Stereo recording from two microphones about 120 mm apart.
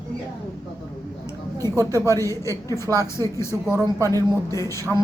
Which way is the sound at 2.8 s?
30° right (ahead or behind).